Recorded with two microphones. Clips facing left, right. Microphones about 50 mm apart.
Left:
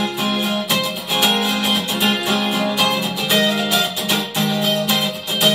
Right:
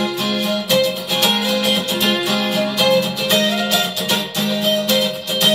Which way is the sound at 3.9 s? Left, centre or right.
Centre.